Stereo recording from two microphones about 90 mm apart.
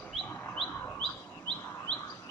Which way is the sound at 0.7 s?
20° left (ahead or behind).